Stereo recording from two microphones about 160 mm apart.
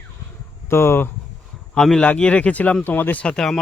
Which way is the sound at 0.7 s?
15° left (ahead or behind).